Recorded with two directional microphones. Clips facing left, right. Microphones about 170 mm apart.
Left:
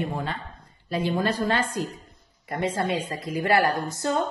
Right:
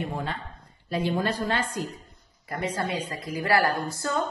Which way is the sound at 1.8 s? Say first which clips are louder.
Left 2 dB; 30° left (ahead or behind).